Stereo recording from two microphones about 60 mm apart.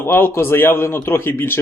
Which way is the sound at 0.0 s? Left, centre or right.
Left.